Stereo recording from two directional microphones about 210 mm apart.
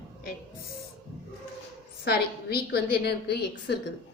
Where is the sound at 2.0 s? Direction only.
50° left (ahead or behind).